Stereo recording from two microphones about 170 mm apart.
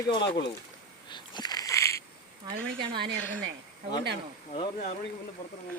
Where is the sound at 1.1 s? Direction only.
25° left (ahead or behind).